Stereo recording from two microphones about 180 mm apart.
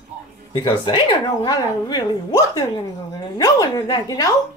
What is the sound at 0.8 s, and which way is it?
A woman's voice, 25° left (ahead or behind).